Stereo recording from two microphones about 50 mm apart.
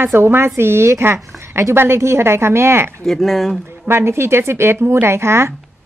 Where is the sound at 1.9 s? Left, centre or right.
Right.